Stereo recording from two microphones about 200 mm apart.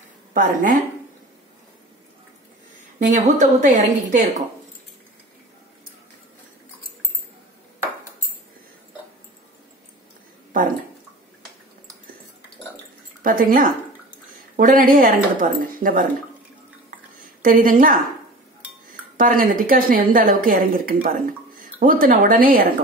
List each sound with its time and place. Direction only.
0.3 s a woman's voice: 40° right (ahead or behind)
3.0 s a woman's voice: 40° right (ahead or behind)
13.2 s speech: 45° right (ahead or behind)
17.4 s speech: 45° right (ahead or behind)